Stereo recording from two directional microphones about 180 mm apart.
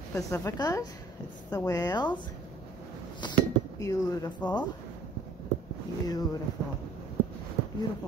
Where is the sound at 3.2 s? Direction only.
20° left (ahead or behind).